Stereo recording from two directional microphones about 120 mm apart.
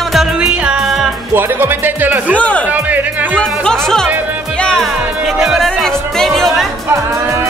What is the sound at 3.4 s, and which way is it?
Music, 5° left (ahead or behind).